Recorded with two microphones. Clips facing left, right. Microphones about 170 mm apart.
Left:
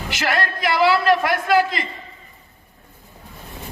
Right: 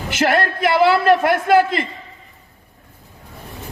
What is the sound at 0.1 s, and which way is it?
A man's voice, 50° right (ahead or behind).